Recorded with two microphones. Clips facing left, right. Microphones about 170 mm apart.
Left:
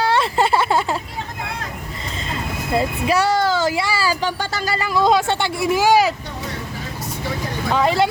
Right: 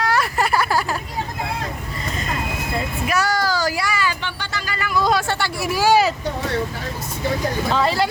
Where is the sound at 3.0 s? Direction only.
30° left (ahead or behind).